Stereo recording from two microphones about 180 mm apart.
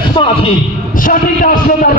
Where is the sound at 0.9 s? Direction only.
50° left (ahead or behind).